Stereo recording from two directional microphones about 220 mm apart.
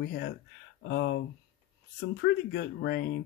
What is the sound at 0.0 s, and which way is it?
Speech, 45° left (ahead or behind).